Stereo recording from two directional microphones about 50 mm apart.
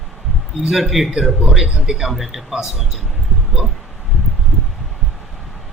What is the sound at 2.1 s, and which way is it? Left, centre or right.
Speech, centre.